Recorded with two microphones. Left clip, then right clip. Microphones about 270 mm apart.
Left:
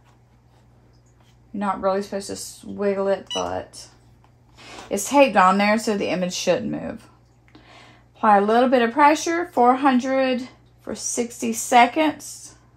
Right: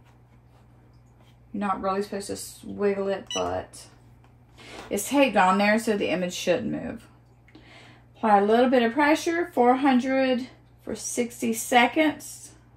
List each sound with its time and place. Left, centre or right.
1.8 s speech: left
3.0 s speech: centre
4.9 s speech: left
8.2 s speech: left
12.2 s speech: centre